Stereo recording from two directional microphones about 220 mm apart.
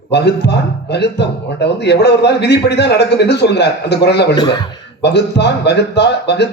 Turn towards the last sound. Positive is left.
turn(degrees=50)  # may be behind; listen again after turning